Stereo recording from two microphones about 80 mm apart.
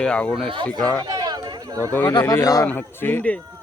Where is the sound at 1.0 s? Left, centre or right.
Right.